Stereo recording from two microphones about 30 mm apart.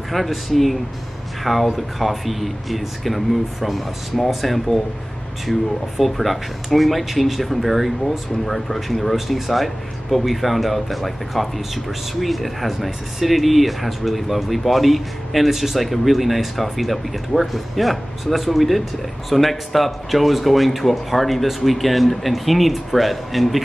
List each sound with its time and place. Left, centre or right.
0.1 s speech: centre